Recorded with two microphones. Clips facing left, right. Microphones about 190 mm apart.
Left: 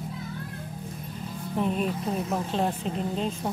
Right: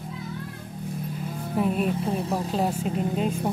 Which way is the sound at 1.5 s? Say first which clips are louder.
Right 2 dB; 5° right (ahead or behind).